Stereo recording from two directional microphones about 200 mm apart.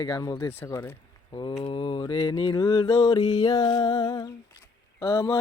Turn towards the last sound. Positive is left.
turn(degrees=15)  # may be behind; listen again after turning